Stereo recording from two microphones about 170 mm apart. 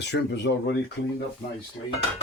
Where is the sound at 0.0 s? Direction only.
90° left.